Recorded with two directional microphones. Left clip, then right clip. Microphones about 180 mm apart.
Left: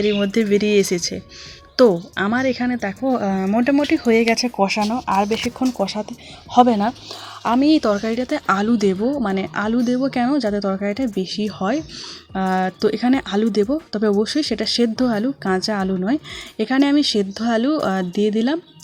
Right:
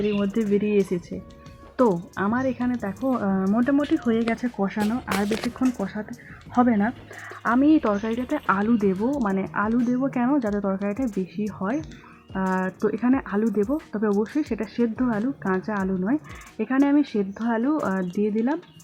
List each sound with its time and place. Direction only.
0.1 s a woman's voice: 30° left (ahead or behind)
3.8 s a woman's voice: 35° left (ahead or behind)
4.1 s speech: 25° left (ahead or behind)
11.4 s a woman's voice: 40° left (ahead or behind); by 17.2 s 20° left (ahead or behind)
17.2 s a woman's voice: 30° left (ahead or behind)